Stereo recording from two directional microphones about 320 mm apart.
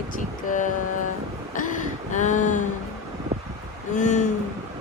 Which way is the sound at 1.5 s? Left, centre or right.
Left.